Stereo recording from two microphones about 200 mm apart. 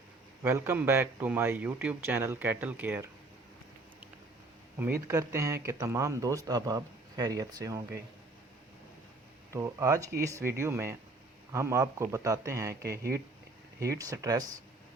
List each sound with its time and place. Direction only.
0.4 s speech: 10° right (ahead or behind)
4.8 s speech: 15° right (ahead or behind)
9.5 s speech: 15° right (ahead or behind)